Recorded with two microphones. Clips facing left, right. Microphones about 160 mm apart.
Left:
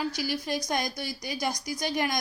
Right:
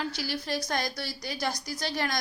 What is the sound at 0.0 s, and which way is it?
A woman's voice, 10° left (ahead or behind).